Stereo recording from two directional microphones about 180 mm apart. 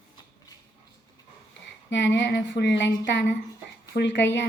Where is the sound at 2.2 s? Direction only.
80° left.